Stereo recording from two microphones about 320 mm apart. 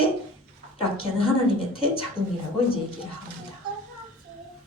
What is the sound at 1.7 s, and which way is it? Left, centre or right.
Speech, centre.